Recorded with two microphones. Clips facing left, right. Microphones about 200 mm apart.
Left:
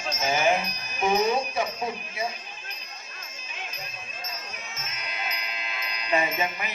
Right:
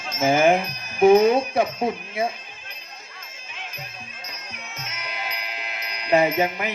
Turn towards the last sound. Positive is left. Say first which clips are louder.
# right 7 dB
turn(degrees=-65)  # may be behind; listen again after turning